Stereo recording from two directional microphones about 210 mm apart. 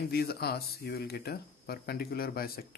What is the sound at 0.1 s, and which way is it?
Speech, 50° left (ahead or behind).